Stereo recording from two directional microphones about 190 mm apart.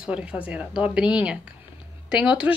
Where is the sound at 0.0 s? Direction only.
5° right (ahead or behind).